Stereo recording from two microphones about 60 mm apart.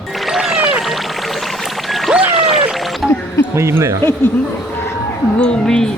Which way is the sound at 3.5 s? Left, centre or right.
Right.